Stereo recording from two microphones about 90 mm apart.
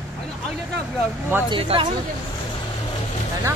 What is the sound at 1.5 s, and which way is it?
Speech, 60° right (ahead or behind).